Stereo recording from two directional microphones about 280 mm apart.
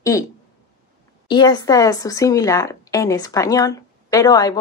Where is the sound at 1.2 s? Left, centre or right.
Centre.